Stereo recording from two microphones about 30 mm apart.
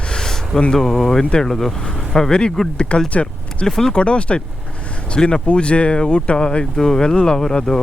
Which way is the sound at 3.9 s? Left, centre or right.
Left.